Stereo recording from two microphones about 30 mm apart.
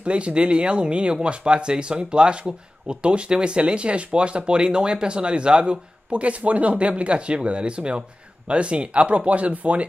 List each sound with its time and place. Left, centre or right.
0.0 s speech: right